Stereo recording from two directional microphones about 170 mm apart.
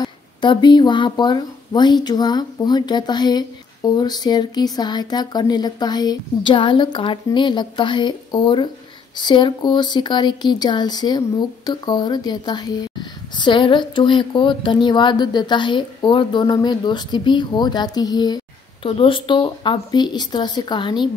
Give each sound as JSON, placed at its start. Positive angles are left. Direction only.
{"t": 0.0, "sound": "a woman's voice", "side_deg": 25}